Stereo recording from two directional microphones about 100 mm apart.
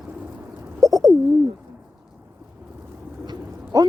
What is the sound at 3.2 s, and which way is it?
Bird, 45° right (ahead or behind).